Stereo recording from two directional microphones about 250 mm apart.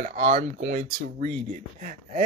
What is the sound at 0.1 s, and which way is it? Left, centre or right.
Speech, right.